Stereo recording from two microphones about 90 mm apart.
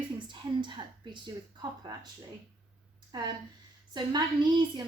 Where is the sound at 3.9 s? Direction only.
55° right (ahead or behind).